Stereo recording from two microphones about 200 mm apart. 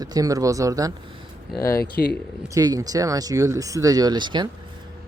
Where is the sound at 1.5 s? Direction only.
15° left (ahead or behind).